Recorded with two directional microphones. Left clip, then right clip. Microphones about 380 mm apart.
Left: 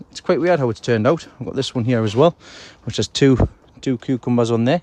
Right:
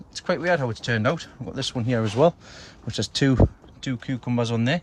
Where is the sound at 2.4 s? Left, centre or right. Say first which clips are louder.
Left 5 dB; centre.